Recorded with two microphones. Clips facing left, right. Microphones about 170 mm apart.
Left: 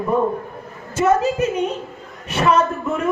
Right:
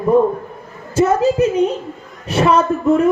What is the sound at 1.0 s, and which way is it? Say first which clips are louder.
A woman's voice: right 4 dB; 35° right (ahead or behind).